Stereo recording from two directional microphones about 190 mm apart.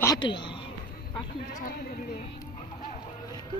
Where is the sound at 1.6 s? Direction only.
45° left (ahead or behind).